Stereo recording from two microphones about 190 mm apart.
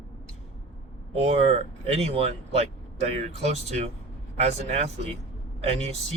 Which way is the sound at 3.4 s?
35° right (ahead or behind).